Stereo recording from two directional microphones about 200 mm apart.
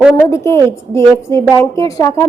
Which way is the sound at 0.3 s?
15° left (ahead or behind).